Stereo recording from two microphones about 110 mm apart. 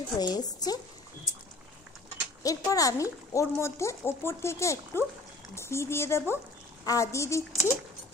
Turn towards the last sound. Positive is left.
turn(degrees=25)  # may be behind; listen again after turning